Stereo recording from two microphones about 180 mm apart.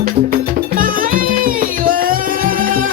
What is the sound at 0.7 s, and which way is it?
Music, 50° right (ahead or behind).